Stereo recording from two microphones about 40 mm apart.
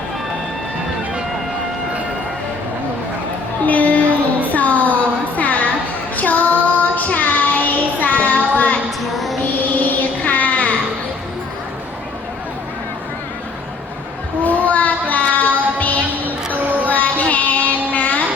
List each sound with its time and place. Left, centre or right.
3.7 s a sound: left
6.1 s child singing: left
9.1 s music: centre
9.8 s music: left
14.4 s child singing: left
16.6 s music: right
16.9 s music: left